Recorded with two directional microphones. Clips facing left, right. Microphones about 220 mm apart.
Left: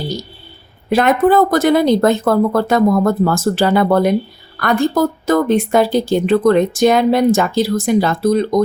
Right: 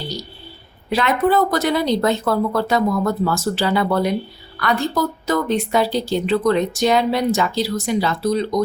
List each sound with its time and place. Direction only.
0.9 s speech: 50° left (ahead or behind)